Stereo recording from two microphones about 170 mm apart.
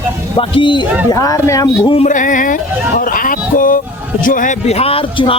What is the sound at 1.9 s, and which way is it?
A man's voice, 45° left (ahead or behind).